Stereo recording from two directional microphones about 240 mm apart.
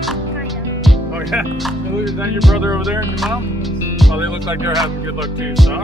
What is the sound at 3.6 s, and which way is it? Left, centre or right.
Music, centre.